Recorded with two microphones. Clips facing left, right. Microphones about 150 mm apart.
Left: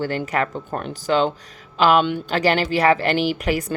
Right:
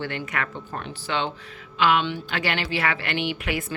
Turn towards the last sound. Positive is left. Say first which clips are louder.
# left 6 dB
turn(degrees=40)  # may be behind; listen again after turning